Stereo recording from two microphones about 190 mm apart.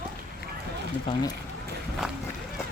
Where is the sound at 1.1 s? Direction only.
25° left (ahead or behind).